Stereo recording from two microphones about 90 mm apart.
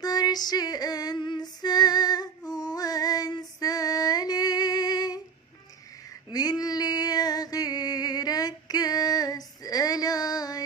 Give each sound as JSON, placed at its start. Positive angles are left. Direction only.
{"t": 0.0, "sound": "female singing", "side_deg": 45}
{"t": 6.3, "sound": "music", "side_deg": 45}